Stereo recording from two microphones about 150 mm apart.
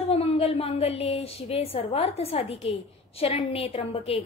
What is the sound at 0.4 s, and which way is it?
A woman's voice, 40° left (ahead or behind).